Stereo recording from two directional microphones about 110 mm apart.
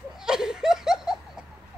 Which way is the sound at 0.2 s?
5° right (ahead or behind).